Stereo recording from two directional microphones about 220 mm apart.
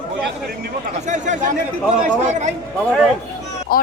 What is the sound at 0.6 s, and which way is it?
Speech, 35° right (ahead or behind).